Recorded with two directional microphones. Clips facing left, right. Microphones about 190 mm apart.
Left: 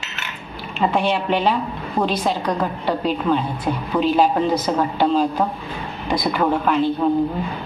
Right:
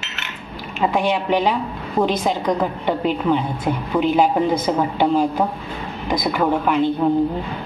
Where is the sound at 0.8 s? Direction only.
10° right (ahead or behind).